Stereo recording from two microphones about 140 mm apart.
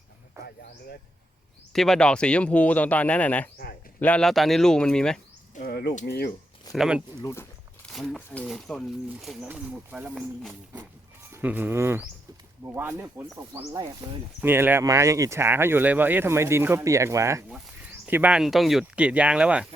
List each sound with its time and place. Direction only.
0.4 s a sound: 20° right (ahead or behind)
1.7 s speech: 5° left (ahead or behind)
5.5 s speech: 65° left (ahead or behind)
6.7 s speech: 5° right (ahead or behind)
11.3 s speech: 15° right (ahead or behind)
13.6 s speech: 30° right (ahead or behind)
14.4 s speech: 15° right (ahead or behind)
18.0 s speech: 10° right (ahead or behind)